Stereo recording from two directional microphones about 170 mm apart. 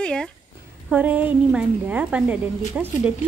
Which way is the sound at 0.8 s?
10° right (ahead or behind).